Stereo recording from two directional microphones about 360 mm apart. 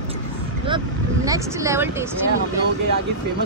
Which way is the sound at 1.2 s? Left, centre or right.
Centre.